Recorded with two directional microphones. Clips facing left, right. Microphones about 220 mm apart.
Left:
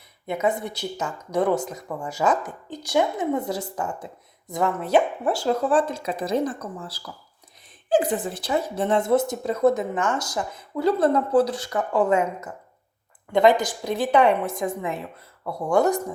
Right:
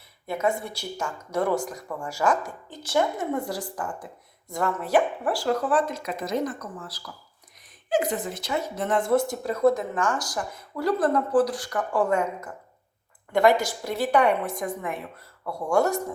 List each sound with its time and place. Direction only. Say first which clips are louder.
0.4 s speech: left 2 dB; 20° left (ahead or behind)